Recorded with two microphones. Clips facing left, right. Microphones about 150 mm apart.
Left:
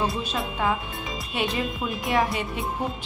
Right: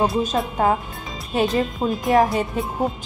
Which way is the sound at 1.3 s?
40° right (ahead or behind).